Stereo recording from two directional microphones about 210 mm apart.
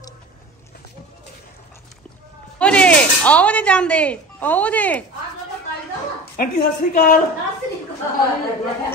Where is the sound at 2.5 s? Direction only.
5° left (ahead or behind).